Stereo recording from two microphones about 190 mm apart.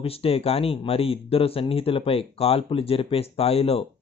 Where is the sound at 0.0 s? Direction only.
30° left (ahead or behind).